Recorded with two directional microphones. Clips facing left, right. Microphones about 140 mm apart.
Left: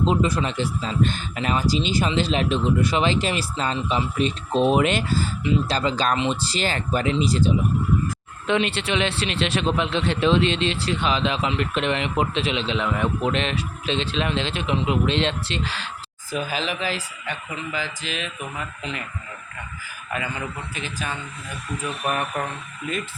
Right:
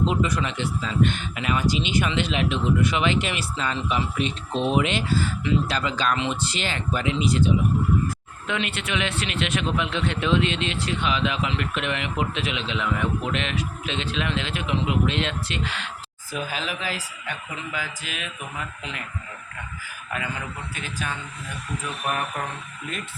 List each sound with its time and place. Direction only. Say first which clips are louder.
0.0 s speech: left 2 dB; 30° left (ahead or behind)
16.4 s speech: left 3 dB; centre (ahead or behind)
20.7 s speech: even; centre (ahead or behind)